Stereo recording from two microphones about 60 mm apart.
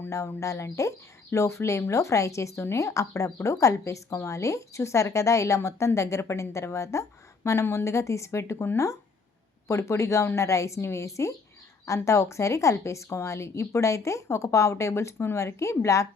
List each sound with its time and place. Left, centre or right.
0.3 s a woman's voice: left
3.2 s a woman's voice: left
7.6 s a woman's voice: left
7.9 s a woman's voice: left